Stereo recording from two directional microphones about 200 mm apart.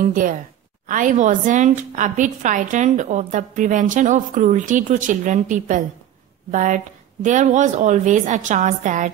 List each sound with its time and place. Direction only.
0.0 s a woman's voice: 40° right (ahead or behind)